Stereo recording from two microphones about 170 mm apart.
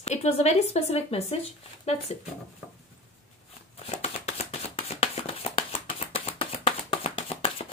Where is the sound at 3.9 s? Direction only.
35° left (ahead or behind).